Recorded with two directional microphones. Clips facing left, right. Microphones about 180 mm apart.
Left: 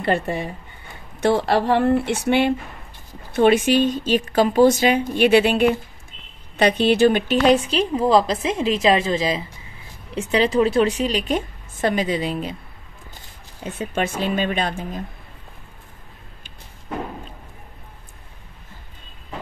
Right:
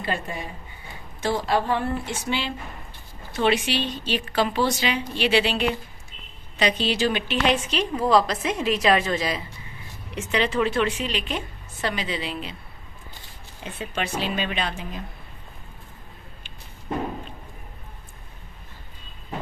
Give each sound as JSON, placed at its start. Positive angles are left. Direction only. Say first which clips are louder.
{"t": 0.0, "sound": "speech", "louder": "left 8 dB", "side_deg": 60}
{"t": 3.3, "sound": "a woman's voice", "louder": "left 7 dB", "side_deg": 50}
{"t": 13.7, "sound": "a woman's voice", "louder": "left 5 dB", "side_deg": 45}